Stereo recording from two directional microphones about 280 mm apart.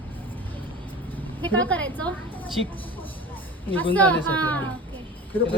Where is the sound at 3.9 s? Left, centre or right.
Centre.